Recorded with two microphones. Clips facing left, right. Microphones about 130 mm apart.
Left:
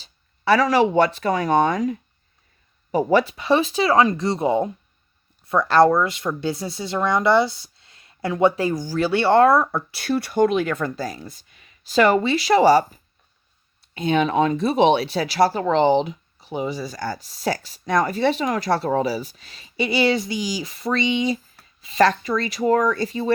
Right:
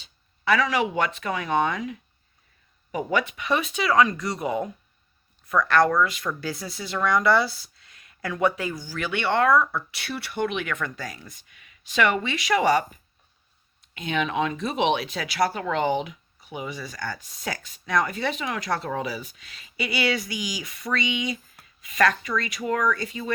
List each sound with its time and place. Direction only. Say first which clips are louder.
0.0 s speech: left 4 dB; 35° left (ahead or behind)
13.9 s speech: left 7 dB; 35° left (ahead or behind)